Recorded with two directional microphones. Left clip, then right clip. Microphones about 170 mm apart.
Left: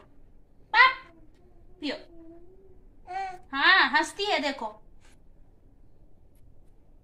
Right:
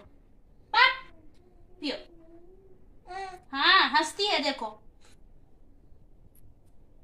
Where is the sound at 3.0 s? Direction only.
10° left (ahead or behind).